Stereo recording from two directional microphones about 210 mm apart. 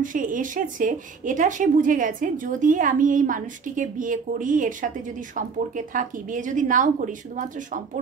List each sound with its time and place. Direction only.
0.0 s speech: 40° right (ahead or behind)